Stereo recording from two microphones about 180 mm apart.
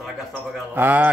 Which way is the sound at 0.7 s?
10° right (ahead or behind).